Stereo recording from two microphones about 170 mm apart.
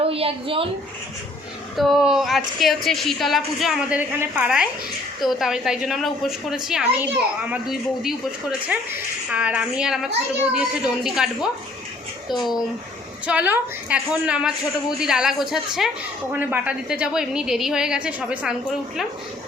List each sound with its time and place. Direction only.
0.0 s a woman's voice: 35° right (ahead or behind)
1.7 s a woman's voice: centre (ahead or behind)
13.2 s a woman's voice: 10° right (ahead or behind)